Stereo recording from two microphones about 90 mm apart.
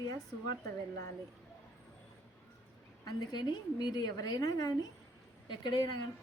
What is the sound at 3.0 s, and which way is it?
A woman's voice, 55° left (ahead or behind).